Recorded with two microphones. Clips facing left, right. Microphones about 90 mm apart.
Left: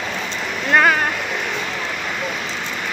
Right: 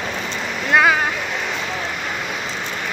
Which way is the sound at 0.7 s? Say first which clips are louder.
Even; 5° right (ahead or behind).